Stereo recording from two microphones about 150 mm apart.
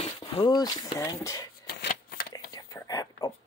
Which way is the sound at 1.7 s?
75° left (ahead or behind).